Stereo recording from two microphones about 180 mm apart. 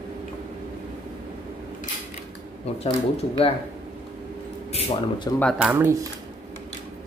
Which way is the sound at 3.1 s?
30° left (ahead or behind).